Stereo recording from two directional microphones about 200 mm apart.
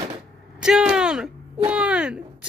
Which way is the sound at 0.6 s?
5° right (ahead or behind).